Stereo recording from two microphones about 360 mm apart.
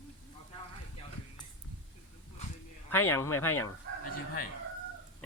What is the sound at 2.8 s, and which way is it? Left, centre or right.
Speech, centre.